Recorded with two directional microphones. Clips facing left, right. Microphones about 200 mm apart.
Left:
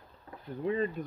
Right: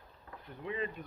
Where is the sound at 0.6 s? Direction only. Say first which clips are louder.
Left 7 dB; 40° left (ahead or behind).